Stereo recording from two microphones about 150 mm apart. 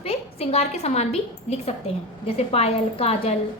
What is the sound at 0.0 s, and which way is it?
A woman's voice, 40° left (ahead or behind).